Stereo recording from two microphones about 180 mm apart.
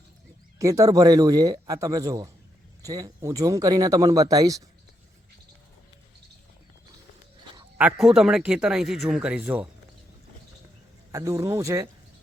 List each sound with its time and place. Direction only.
0.6 s speech: 15° right (ahead or behind)
7.8 s speech: 5° right (ahead or behind)
11.1 s speech: 15° right (ahead or behind)